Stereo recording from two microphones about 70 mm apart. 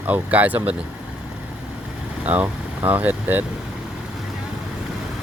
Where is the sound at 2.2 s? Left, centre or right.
Right.